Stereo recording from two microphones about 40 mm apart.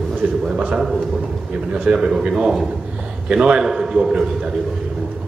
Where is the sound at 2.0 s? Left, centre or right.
Centre.